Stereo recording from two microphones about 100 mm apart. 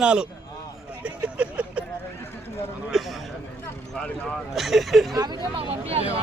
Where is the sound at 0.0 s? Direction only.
10° right (ahead or behind).